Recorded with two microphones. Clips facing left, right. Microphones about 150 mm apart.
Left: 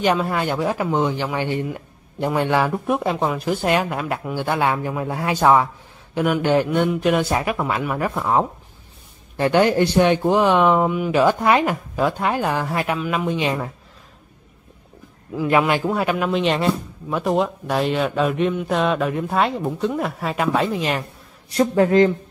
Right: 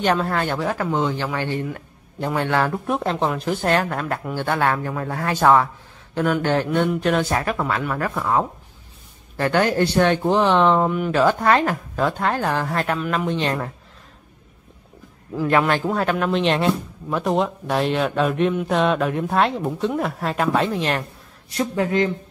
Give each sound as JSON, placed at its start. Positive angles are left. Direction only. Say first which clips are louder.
{"t": 0.0, "sound": "speech", "louder": "left 1 dB", "side_deg": 10}
{"t": 15.5, "sound": "speech", "louder": "left 1 dB", "side_deg": 10}
{"t": 21.5, "sound": "speech", "louder": "left 6 dB", "side_deg": 40}